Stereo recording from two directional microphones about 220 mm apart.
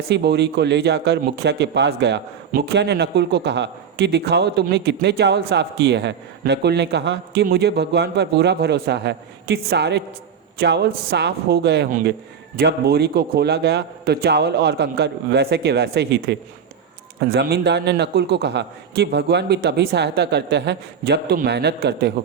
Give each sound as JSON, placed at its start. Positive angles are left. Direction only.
{"t": 0.1, "sound": "speech", "side_deg": -50}
{"t": 11.9, "sound": "speech", "side_deg": -35}
{"t": 12.5, "sound": "speech", "side_deg": -45}